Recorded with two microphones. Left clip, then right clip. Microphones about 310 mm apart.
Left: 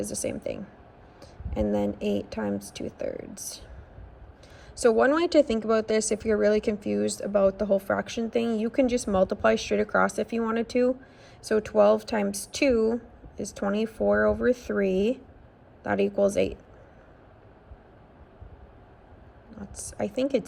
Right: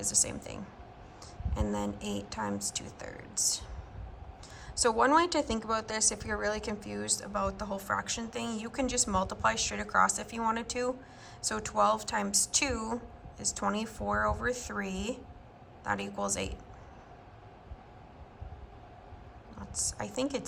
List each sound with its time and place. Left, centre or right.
0.0 s speech: centre
4.7 s speech: centre
19.7 s speech: centre